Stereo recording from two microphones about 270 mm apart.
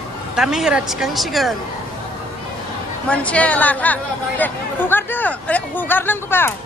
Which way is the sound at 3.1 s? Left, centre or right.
Centre.